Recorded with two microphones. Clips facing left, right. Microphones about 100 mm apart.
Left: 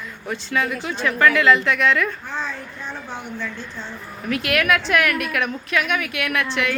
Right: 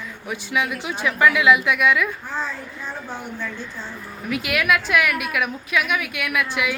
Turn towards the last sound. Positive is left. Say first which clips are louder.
# left 1 dB
turn(degrees=-5)  # may be behind; listen again after turning